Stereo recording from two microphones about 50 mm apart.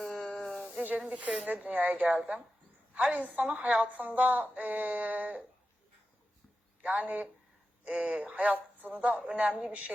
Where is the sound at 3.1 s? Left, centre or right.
Right.